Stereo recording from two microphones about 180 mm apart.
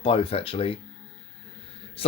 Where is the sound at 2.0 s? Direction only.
30° left (ahead or behind).